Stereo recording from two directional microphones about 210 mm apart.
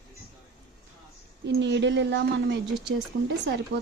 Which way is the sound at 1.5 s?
55° right (ahead or behind).